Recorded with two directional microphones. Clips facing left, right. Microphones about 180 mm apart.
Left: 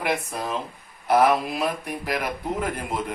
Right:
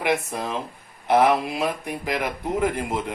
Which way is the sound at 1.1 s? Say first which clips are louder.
Right 1 dB; 25° right (ahead or behind).